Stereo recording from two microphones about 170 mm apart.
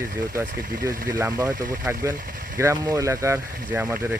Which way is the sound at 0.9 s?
15° right (ahead or behind).